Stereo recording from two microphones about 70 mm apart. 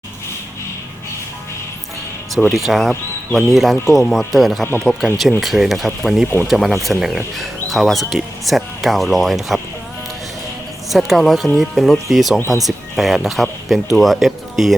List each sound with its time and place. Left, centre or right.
2.5 s speech: centre
6.2 s speech: left
6.5 s speech: centre
10.8 s speech: centre